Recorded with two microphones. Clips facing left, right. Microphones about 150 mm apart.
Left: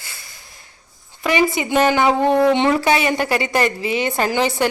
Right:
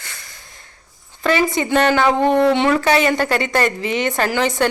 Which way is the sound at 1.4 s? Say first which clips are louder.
Left 2 dB; 10° left (ahead or behind).